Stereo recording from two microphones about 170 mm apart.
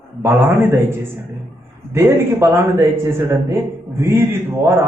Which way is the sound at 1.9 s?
15° right (ahead or behind).